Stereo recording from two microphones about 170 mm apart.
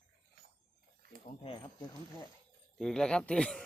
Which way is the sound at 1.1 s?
55° right (ahead or behind).